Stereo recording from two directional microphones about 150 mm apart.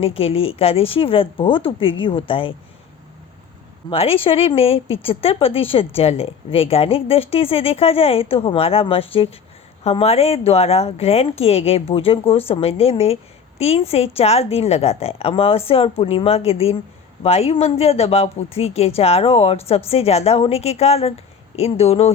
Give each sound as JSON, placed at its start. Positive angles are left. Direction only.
{"t": 0.0, "sound": "speech", "side_deg": 40}
{"t": 3.8, "sound": "speech", "side_deg": 40}